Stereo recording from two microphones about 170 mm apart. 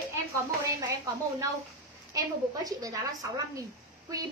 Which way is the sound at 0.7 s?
20° right (ahead or behind).